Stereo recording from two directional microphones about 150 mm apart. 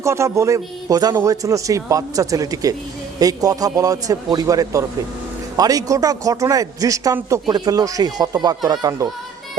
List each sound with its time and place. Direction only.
0.0 s a man's voice: 20° right (ahead or behind)